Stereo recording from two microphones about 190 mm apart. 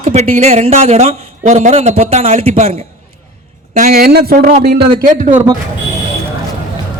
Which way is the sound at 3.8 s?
45° right (ahead or behind).